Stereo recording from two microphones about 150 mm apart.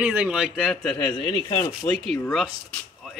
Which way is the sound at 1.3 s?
30° left (ahead or behind).